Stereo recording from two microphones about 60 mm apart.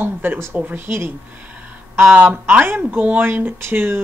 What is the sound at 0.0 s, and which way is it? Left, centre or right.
Speech, right.